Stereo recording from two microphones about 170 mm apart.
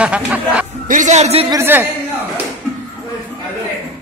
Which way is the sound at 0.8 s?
50° right (ahead or behind).